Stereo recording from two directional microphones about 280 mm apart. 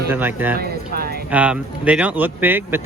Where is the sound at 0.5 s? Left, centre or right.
Right.